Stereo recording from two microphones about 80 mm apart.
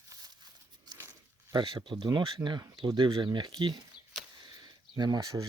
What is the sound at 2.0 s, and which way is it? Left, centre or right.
Speech, right.